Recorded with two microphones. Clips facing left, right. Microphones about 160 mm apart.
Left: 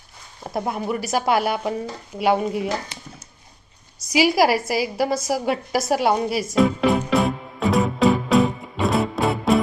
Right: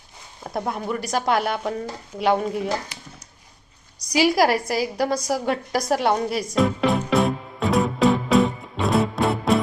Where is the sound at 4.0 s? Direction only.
5° left (ahead or behind).